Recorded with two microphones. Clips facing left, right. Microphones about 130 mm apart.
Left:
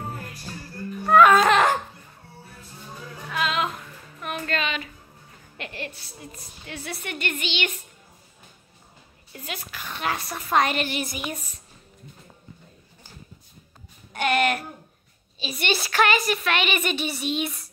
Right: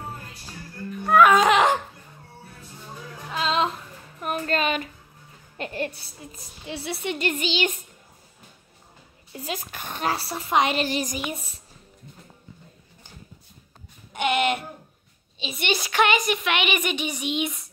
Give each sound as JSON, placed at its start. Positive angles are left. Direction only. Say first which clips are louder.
{"t": 1.0, "sound": "music", "louder": "left 1 dB", "side_deg": -10}
{"t": 3.3, "sound": "music", "louder": "right 2 dB", "side_deg": -30}
{"t": 4.2, "sound": "music", "louder": "right 3 dB", "side_deg": -40}
{"t": 5.6, "sound": "a woman's voice", "louder": "right 6 dB", "side_deg": -40}
{"t": 6.7, "sound": "a woman's voice", "louder": "right 5 dB", "side_deg": -25}
{"t": 9.6, "sound": "a woman's voice", "louder": "right 2 dB", "side_deg": -45}
{"t": 14.1, "sound": "a sound", "louder": "even", "side_deg": -20}
{"t": 15.6, "sound": "a woman's voice", "louder": "even", "side_deg": -15}